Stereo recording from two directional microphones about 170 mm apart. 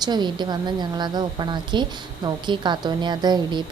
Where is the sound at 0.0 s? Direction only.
25° right (ahead or behind).